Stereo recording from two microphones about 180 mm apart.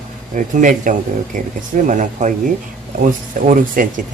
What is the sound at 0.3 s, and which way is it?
Speech, 45° right (ahead or behind).